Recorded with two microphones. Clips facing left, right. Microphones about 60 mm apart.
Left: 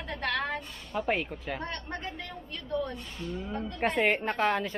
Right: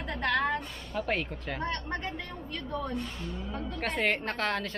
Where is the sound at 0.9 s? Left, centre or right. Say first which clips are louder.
Left 2 dB; centre.